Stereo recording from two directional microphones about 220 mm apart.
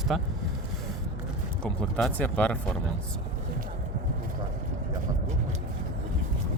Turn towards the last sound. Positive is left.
turn(degrees=-35)  # may be behind; listen again after turning